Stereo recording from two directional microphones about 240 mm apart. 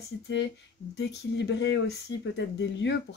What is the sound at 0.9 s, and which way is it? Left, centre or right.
Speech, left.